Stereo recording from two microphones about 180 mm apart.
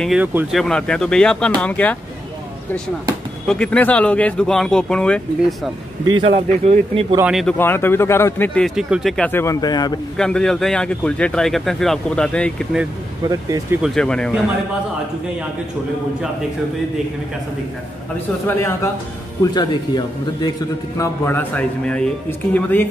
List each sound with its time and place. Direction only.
0.0 s a man's voice: 5° right (ahead or behind)
0.6 s a man's voice: 5° left (ahead or behind)
3.4 s a man's voice: 5° left (ahead or behind)
6.3 s speech: 35° right (ahead or behind)
7.2 s a man's voice: centre (ahead or behind)
7.5 s speech: 10° left (ahead or behind)
10.1 s a man's voice: 5° left (ahead or behind)
13.3 s speech: 20° right (ahead or behind)
13.8 s a man's voice: 5° left (ahead or behind)
19.4 s speech: 20° left (ahead or behind)
21.0 s speech: 10° left (ahead or behind)